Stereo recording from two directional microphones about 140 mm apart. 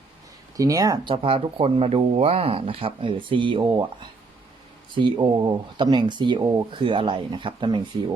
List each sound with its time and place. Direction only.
0.5 s speech: 25° right (ahead or behind)
1.1 s speech: 40° right (ahead or behind)